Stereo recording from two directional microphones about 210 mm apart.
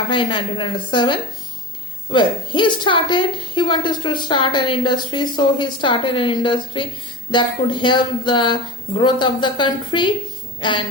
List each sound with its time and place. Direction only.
0.1 s a woman's voice: 20° left (ahead or behind)